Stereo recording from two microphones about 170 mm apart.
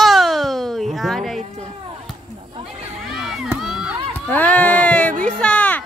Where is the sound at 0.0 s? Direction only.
Centre (ahead or behind).